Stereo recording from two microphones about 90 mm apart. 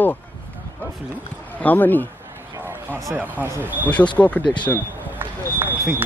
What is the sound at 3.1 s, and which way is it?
Speech, 20° right (ahead or behind).